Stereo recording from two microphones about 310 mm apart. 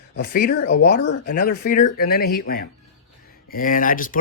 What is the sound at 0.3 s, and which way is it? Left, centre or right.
Speech, left.